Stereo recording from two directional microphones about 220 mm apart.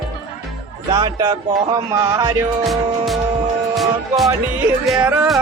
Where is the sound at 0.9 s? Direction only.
20° right (ahead or behind).